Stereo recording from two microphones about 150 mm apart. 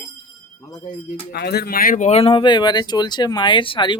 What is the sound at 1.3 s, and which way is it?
Speech, 90° left.